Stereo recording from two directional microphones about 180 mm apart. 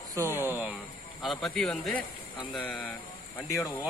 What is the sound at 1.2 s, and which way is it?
Speech, centre (ahead or behind).